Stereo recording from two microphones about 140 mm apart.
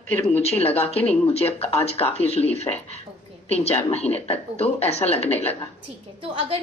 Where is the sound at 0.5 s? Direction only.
45° left (ahead or behind).